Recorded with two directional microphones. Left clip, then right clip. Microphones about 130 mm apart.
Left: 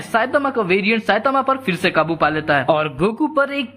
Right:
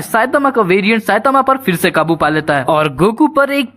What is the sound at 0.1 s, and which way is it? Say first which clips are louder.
Speech: right 5 dB; 35° right (ahead or behind).